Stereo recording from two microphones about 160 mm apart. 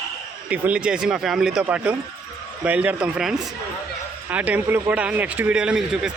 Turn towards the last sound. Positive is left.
turn(degrees=-5)  # may be behind; listen again after turning